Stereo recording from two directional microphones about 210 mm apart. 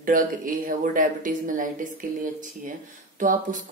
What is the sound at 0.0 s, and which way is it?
Speech, 40° right (ahead or behind).